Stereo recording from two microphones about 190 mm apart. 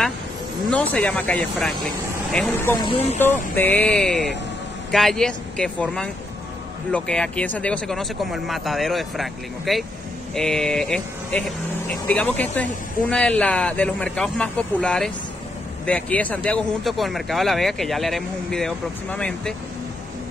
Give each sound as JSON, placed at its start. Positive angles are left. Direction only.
{"t": 0.7, "sound": "speech", "side_deg": 5}
{"t": 2.8, "sound": "speech", "side_deg": 30}
{"t": 3.5, "sound": "a man's voice", "side_deg": 10}